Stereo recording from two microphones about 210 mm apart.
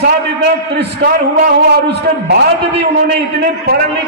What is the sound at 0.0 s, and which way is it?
A man's voice, 50° right (ahead or behind).